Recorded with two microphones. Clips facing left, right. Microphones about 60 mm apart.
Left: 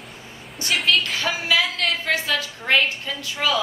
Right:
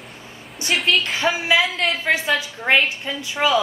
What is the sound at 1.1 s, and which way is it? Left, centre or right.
A woman's voice, right.